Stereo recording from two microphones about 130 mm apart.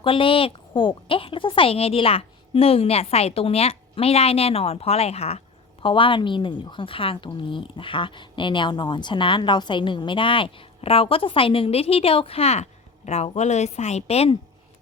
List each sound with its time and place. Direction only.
0.0 s a woman's voice: 40° left (ahead or behind)
5.8 s a woman's voice: 40° left (ahead or behind)